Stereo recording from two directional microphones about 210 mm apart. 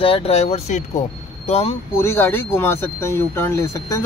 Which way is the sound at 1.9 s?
10° left (ahead or behind).